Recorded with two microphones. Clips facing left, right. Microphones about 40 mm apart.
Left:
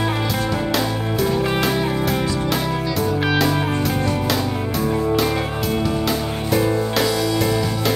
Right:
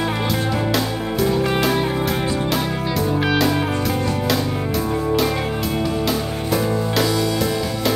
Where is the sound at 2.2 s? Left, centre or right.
Right.